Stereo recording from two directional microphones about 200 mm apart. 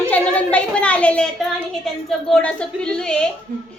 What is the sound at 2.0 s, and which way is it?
A woman's voice, 5° left (ahead or behind).